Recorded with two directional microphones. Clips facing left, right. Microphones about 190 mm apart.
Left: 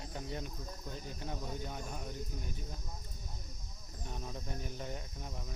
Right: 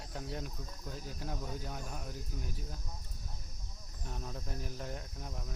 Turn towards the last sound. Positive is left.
turn(degrees=0)  # may be behind; listen again after turning